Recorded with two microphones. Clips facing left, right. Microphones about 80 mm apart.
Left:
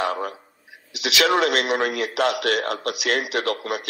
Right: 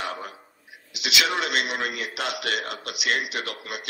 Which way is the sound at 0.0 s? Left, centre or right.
Left.